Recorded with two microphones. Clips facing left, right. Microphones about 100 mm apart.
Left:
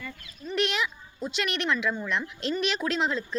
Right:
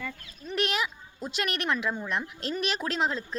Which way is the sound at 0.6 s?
40° right (ahead or behind).